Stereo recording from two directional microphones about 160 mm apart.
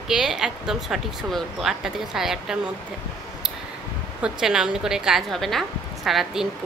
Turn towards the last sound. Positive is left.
turn(degrees=0)  # may be behind; listen again after turning